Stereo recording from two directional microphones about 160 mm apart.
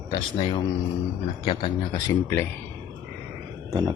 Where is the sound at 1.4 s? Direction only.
30° left (ahead or behind).